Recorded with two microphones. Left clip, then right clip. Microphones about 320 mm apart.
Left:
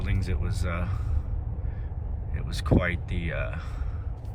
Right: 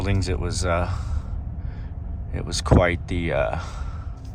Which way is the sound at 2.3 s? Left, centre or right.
Centre.